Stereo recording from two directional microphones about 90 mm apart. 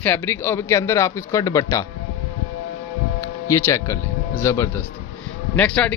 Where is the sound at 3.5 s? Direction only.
35° left (ahead or behind).